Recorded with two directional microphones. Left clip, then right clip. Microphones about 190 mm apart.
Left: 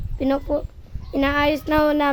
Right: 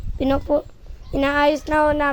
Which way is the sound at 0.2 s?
10° right (ahead or behind).